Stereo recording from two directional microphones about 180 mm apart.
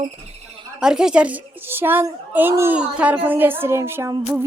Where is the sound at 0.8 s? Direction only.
5° right (ahead or behind).